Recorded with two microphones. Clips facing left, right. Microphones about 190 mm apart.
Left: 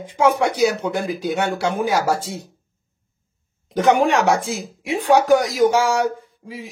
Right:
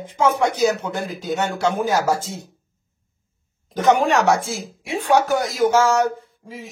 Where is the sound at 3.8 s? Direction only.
15° left (ahead or behind).